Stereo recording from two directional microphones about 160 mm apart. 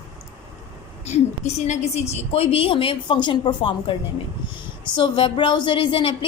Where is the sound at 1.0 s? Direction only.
45° left (ahead or behind).